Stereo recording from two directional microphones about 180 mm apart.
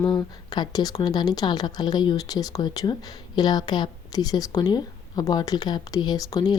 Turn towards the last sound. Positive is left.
turn(degrees=20)  # may be behind; listen again after turning